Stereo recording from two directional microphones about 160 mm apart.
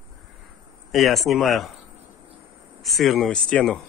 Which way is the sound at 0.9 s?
Centre (ahead or behind).